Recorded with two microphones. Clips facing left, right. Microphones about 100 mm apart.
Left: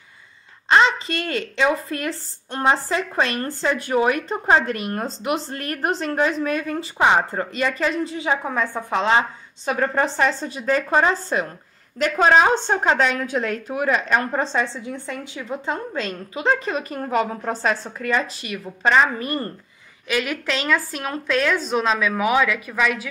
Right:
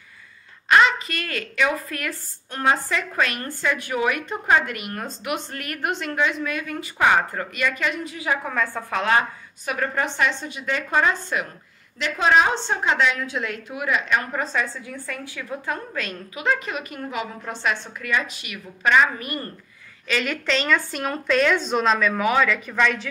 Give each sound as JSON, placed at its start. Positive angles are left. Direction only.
{"t": 0.7, "sound": "speech", "side_deg": 30}
{"t": 12.0, "sound": "speech", "side_deg": 45}
{"t": 20.1, "sound": "a woman's voice", "side_deg": 10}